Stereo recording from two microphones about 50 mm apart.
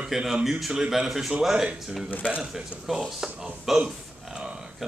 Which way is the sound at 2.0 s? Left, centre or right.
Left.